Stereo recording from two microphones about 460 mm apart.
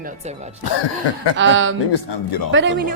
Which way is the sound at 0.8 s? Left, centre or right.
Left.